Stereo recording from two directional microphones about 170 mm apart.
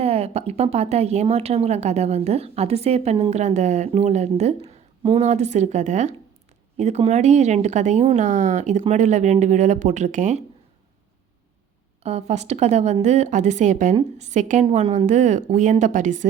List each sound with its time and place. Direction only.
0.0 s a woman's voice: 35° right (ahead or behind)
12.0 s a woman's voice: 40° right (ahead or behind)